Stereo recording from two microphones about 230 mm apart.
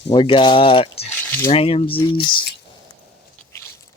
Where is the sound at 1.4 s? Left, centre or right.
Left.